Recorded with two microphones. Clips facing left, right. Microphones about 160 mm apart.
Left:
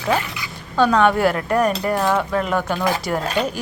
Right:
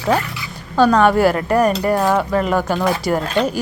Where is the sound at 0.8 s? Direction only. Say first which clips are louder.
Right 3 dB; 5° right (ahead or behind).